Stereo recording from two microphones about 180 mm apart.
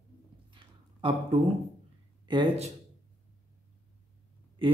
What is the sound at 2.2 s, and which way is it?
Speech, 25° right (ahead or behind).